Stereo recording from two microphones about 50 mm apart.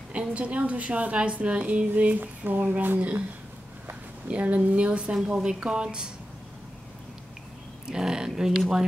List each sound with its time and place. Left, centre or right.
0.1 s a woman's voice: right
2.1 s speech: right
4.3 s a woman's voice: right
7.8 s speech: centre